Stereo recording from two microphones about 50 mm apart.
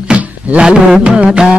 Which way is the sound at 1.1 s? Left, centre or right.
Centre.